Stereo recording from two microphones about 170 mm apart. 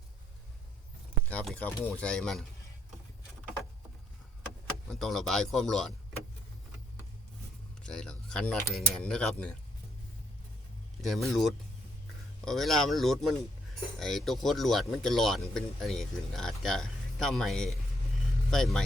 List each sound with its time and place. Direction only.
1.3 s speech: 10° left (ahead or behind)
4.9 s speech: centre (ahead or behind)
7.8 s speech: 5° left (ahead or behind)
11.0 s speech: centre (ahead or behind)